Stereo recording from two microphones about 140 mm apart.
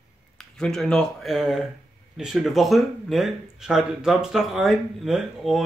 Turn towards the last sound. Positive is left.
turn(degrees=0)  # may be behind; listen again after turning